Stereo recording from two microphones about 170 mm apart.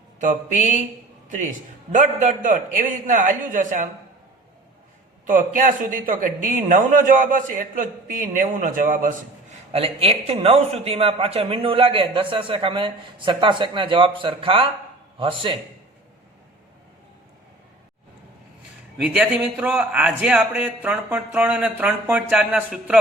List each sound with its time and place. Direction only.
0.2 s a man's voice: 50° right (ahead or behind)
5.2 s a man's voice: 50° right (ahead or behind)
9.7 s a man's voice: 35° right (ahead or behind)
19.0 s a man's voice: 5° right (ahead or behind)